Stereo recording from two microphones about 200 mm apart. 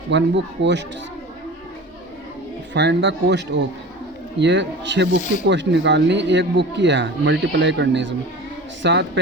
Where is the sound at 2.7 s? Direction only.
60° right (ahead or behind).